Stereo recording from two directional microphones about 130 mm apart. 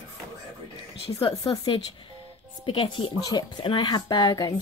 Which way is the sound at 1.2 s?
35° left (ahead or behind).